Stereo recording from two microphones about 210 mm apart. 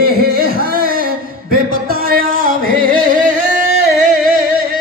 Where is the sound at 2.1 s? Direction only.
40° right (ahead or behind).